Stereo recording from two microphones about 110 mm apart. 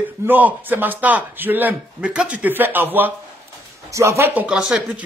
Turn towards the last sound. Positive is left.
turn(degrees=-10)  # may be behind; listen again after turning